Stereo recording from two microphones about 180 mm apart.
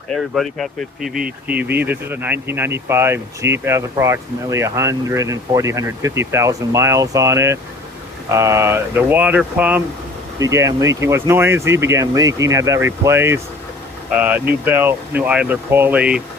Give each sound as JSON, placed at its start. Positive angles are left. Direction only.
{"t": 0.1, "sound": "speech", "side_deg": 0}
{"t": 1.7, "sound": "speech", "side_deg": -10}